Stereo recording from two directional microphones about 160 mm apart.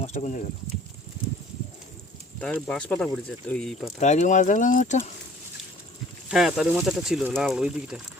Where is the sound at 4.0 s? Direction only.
50° left (ahead or behind).